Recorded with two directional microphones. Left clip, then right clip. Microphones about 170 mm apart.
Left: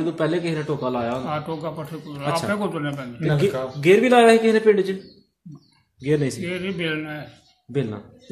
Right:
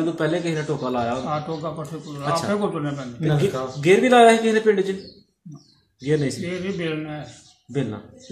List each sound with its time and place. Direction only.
0.0 s a man's voice: 55° left (ahead or behind)
1.3 s a man's voice: 25° left (ahead or behind)
3.2 s a man's voice: 10° right (ahead or behind)
3.8 s a man's voice: 55° left (ahead or behind)
6.0 s a man's voice: 60° left (ahead or behind)
6.4 s a man's voice: 20° left (ahead or behind)